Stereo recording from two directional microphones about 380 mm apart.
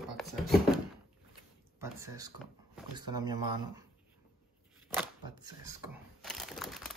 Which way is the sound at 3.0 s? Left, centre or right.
Centre.